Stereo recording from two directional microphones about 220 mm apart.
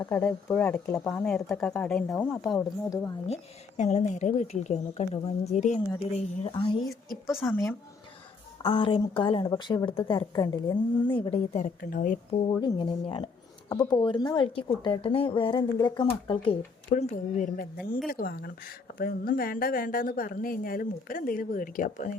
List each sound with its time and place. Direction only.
0.0 s speech: 10° left (ahead or behind)
2.9 s speech: 15° left (ahead or behind)
3.2 s speech: 30° left (ahead or behind)
8.6 s speech: 25° left (ahead or behind)
12.5 s speech: 20° left (ahead or behind)
16.9 s speech: 35° left (ahead or behind)